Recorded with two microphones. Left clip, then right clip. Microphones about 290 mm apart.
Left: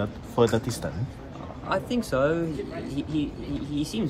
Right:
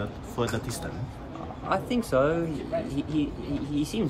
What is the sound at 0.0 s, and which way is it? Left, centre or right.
Speech, centre.